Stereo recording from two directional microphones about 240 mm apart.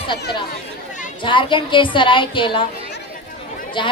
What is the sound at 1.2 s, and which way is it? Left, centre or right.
A woman's voice, left.